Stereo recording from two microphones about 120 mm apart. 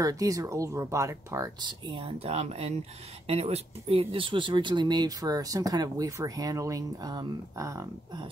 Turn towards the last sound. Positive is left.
turn(degrees=-25)  # may be behind; listen again after turning